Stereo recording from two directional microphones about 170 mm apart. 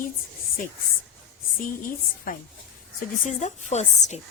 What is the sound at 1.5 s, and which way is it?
Speech, 55° left (ahead or behind).